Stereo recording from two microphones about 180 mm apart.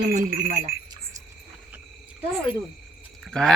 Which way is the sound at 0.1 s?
20° right (ahead or behind).